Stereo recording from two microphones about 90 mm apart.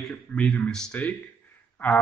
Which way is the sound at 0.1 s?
15° left (ahead or behind).